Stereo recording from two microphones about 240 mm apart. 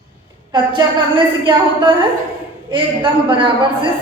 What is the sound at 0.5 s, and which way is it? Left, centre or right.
A man's voice, centre.